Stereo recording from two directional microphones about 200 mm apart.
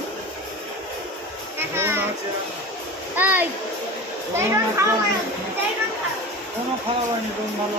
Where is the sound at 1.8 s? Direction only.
10° right (ahead or behind).